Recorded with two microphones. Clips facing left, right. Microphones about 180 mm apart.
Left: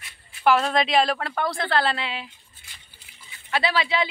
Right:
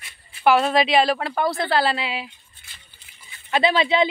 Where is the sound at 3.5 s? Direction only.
20° right (ahead or behind).